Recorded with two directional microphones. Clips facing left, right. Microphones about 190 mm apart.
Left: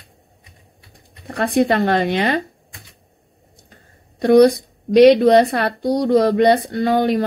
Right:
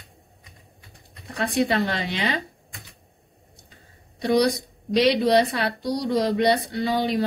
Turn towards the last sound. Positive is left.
turn(degrees=50)  # may be behind; listen again after turning